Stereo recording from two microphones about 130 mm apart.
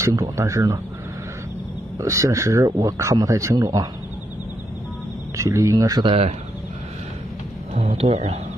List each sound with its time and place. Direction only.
0.0 s speech: 25° right (ahead or behind)
2.0 s speech: 25° right (ahead or behind)
5.4 s speech: 25° right (ahead or behind)
7.7 s speech: 55° right (ahead or behind)